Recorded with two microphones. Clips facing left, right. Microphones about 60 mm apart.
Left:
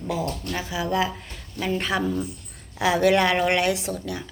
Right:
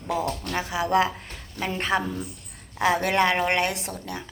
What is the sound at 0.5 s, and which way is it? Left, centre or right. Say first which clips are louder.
Speech: right 3 dB; right.